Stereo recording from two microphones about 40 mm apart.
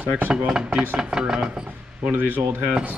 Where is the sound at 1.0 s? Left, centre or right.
Centre.